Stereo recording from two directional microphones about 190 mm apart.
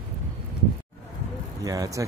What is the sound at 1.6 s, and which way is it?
Speech, 15° right (ahead or behind).